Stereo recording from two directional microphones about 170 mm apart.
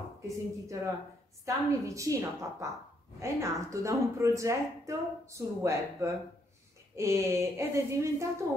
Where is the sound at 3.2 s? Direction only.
15° right (ahead or behind).